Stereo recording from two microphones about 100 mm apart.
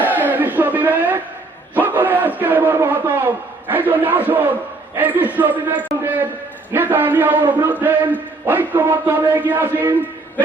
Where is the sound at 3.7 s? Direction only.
20° right (ahead or behind).